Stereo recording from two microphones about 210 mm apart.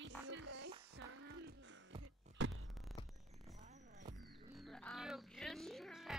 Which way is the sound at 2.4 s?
60° right (ahead or behind).